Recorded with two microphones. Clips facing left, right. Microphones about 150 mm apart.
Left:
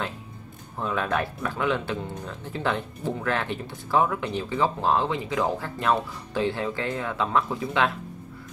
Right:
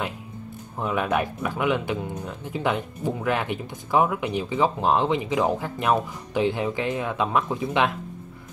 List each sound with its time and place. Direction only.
0.7 s speech: 15° right (ahead or behind)